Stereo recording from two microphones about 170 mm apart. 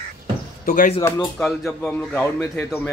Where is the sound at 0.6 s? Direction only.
50° left (ahead or behind).